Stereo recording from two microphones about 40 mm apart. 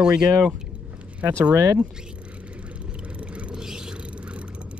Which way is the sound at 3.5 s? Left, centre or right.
Centre.